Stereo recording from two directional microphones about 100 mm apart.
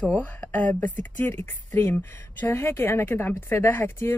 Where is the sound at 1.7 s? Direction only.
30° left (ahead or behind).